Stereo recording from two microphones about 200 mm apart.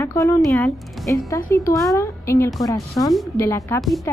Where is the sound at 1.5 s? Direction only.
15° left (ahead or behind).